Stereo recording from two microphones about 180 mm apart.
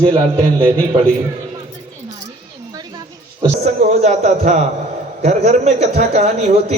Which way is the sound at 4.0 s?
40° right (ahead or behind).